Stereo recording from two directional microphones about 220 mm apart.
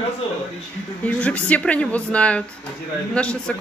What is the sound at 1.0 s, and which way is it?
Speech, 5° left (ahead or behind).